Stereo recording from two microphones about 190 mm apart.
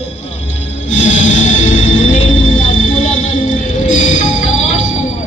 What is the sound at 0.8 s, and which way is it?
Music, 40° left (ahead or behind).